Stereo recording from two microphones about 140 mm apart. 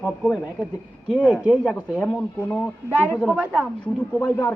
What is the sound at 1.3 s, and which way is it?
A man's voice, 10° right (ahead or behind).